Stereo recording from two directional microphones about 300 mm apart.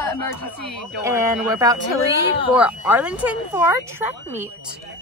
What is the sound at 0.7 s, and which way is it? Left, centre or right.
Speech, centre.